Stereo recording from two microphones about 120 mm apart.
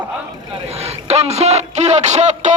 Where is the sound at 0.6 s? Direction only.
60° right (ahead or behind); by 2.5 s 75° right (ahead or behind).